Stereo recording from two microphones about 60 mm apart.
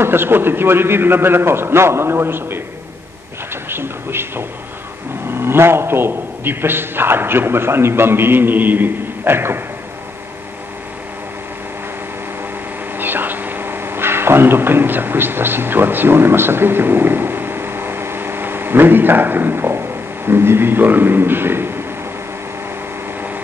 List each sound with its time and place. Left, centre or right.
0.0 s a man's voice: right
3.6 s a sound: right
5.3 s a man's voice: right
12.9 s speech: right